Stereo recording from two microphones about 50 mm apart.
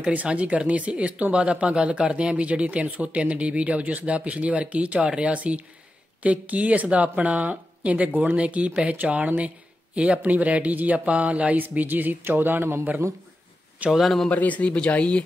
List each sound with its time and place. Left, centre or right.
0.1 s speech: right
14.0 s speech: centre
14.3 s speech: left